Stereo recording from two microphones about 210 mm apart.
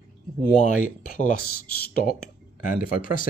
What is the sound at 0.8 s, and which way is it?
Speech, 40° left (ahead or behind).